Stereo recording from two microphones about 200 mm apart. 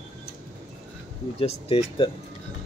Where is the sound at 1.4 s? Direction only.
30° left (ahead or behind).